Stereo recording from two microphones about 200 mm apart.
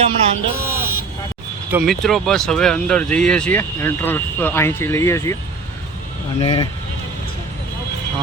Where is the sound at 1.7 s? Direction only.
Centre (ahead or behind).